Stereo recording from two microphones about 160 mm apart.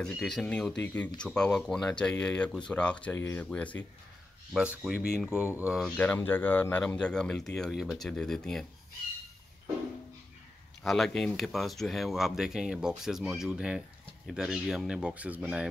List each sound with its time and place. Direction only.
0.0 s speech: 5° left (ahead or behind)
4.6 s speech: 5° right (ahead or behind)
5.9 s speech: 10° left (ahead or behind)
10.8 s speech: centre (ahead or behind)